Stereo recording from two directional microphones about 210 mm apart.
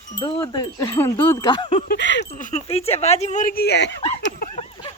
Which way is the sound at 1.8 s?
55° left (ahead or behind).